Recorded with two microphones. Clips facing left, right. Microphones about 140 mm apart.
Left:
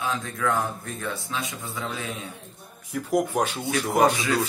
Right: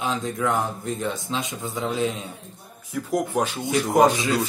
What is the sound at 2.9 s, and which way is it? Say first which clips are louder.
Speech: right 1 dB; centre (ahead or behind).